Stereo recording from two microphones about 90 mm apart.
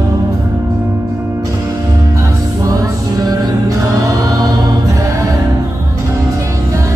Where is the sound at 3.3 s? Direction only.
40° right (ahead or behind).